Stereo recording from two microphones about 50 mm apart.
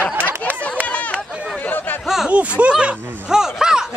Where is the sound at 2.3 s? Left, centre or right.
Right.